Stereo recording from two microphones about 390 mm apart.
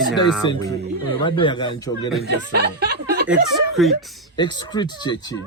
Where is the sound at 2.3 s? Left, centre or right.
Right.